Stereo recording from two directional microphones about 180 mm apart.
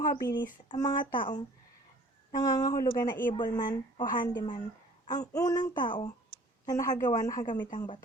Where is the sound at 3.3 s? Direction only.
25° left (ahead or behind).